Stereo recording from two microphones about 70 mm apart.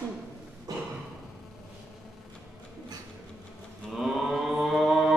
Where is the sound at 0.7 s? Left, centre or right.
Right.